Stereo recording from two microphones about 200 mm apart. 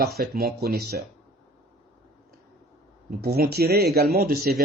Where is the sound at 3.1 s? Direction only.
50° right (ahead or behind).